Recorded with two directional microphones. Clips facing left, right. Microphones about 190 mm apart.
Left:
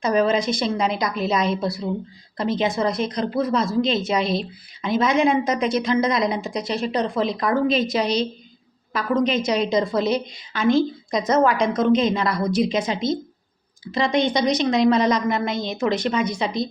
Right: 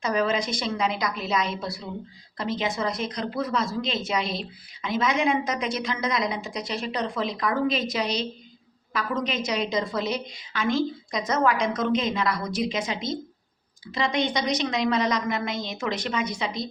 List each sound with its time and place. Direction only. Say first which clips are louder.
0.0 s speech: left 5 dB; 30° left (ahead or behind)